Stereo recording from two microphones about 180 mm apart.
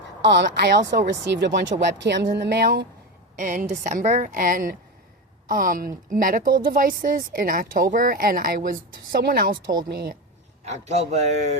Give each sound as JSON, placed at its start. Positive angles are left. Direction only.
{"t": 0.2, "sound": "a woman's voice", "side_deg": -80}
{"t": 3.3, "sound": "a man's voice", "side_deg": -45}
{"t": 10.7, "sound": "a man's voice", "side_deg": -40}